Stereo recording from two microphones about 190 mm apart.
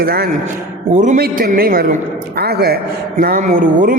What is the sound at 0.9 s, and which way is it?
A man's voice, 40° right (ahead or behind).